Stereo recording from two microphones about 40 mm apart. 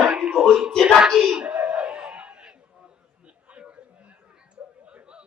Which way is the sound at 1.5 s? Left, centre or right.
Right.